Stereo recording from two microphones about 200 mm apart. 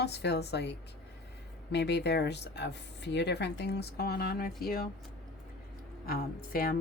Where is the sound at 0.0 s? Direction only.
55° left (ahead or behind).